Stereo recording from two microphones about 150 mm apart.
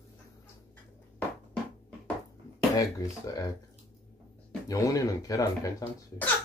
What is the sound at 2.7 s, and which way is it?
Speech, 25° left (ahead or behind).